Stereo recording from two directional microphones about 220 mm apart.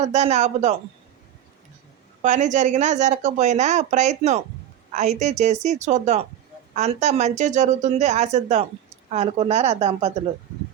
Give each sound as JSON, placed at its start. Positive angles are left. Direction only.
{"t": 0.0, "sound": "speech", "side_deg": -30}
{"t": 2.2, "sound": "a woman's voice", "side_deg": -35}